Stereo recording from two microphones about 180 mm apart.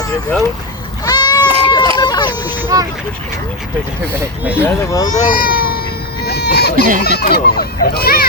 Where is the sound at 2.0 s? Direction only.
25° left (ahead or behind).